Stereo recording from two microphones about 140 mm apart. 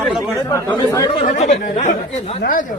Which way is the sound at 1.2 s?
60° left (ahead or behind).